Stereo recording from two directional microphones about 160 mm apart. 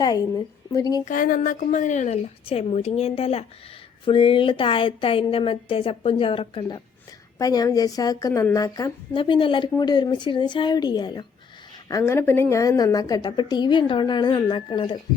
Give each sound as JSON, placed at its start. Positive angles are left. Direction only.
{"t": 0.0, "sound": "a woman's voice", "side_deg": 25}
{"t": 1.0, "sound": "a woman's voice", "side_deg": 60}